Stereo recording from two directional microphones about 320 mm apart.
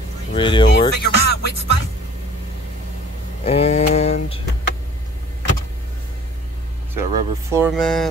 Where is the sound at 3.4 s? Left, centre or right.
Centre.